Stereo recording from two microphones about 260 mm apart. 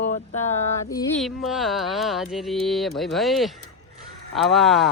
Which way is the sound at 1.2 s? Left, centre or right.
Centre.